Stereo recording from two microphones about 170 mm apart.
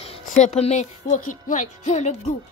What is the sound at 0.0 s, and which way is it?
Speech, 40° left (ahead or behind).